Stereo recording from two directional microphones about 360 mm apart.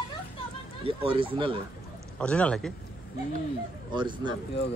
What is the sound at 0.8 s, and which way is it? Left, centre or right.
Speech, centre.